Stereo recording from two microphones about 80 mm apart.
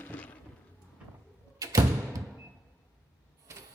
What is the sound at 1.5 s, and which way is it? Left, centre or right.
Music, right.